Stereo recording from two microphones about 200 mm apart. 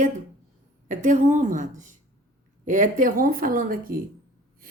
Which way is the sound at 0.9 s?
35° right (ahead or behind).